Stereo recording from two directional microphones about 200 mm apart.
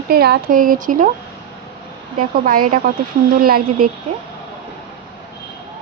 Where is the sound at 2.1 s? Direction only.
45° right (ahead or behind).